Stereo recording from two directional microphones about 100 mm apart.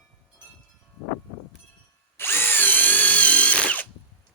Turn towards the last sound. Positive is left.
turn(degrees=15)  # may be behind; listen again after turning